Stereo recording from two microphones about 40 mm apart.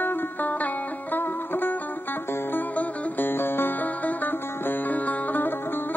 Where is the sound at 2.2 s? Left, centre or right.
Left.